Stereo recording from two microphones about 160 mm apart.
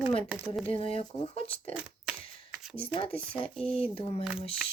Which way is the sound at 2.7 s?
35° left (ahead or behind).